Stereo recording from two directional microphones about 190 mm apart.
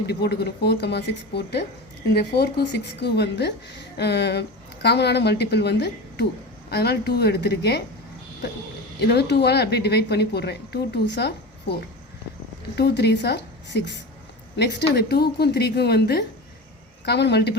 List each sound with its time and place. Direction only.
0.1 s a woman's voice: 60° left (ahead or behind)
9.0 s a woman's voice: 60° left (ahead or behind)
12.7 s a woman's voice: 60° left (ahead or behind)